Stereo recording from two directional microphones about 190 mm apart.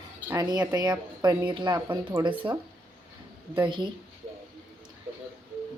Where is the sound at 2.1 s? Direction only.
10° right (ahead or behind).